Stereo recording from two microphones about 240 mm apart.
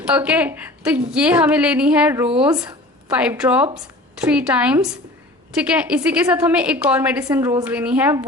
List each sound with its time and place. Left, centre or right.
0.0 s a woman's voice: centre